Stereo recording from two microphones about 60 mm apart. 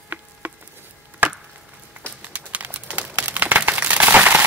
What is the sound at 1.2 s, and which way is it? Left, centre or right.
Chop, right.